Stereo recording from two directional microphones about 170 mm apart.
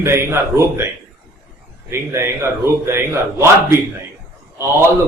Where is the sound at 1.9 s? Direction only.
15° right (ahead or behind).